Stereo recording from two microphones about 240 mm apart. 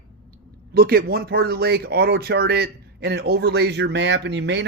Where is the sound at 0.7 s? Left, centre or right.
Right.